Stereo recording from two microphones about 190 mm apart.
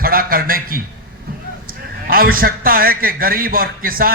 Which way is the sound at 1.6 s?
50° right (ahead or behind).